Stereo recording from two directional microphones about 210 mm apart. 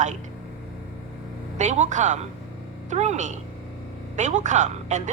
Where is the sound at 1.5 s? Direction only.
35° right (ahead or behind).